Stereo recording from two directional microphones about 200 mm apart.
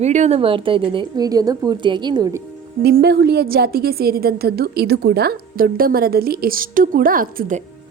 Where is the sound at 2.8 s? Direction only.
55° right (ahead or behind).